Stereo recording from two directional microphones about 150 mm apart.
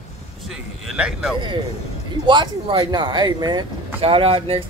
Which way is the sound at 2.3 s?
30° right (ahead or behind).